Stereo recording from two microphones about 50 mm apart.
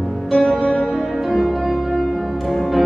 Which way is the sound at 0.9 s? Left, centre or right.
Centre.